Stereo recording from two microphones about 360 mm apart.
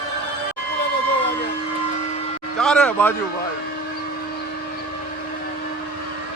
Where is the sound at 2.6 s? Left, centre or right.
Centre.